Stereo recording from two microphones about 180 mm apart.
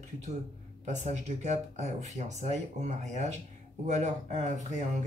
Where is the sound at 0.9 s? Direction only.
40° right (ahead or behind).